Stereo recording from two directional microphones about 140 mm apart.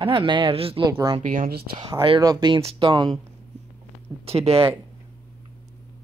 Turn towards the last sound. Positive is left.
turn(degrees=-45)  # may be behind; listen again after turning